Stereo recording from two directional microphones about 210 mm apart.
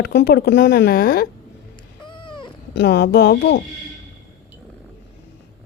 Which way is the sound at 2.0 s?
25° left (ahead or behind).